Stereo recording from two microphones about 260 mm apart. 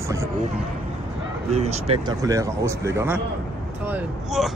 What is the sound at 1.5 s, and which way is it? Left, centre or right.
Speech, right.